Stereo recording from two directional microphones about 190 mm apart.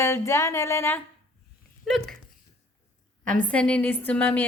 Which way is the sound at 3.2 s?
5° left (ahead or behind).